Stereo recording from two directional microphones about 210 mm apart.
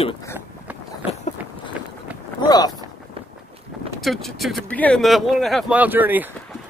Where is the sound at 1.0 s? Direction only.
30° left (ahead or behind).